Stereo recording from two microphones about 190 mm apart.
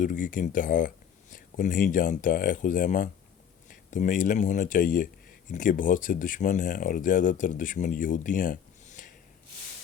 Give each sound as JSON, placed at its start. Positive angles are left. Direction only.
{"t": 0.0, "sound": "speech", "side_deg": 45}